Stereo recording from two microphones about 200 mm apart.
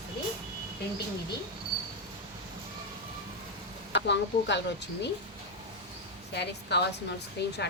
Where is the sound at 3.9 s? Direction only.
60° left (ahead or behind).